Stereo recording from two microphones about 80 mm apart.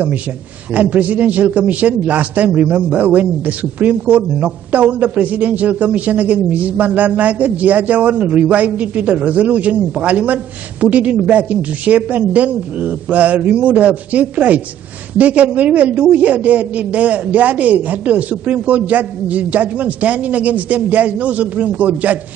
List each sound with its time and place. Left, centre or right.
0.7 s a man's voice: centre